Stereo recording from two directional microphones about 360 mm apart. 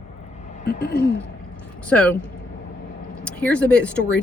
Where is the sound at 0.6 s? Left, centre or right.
Left.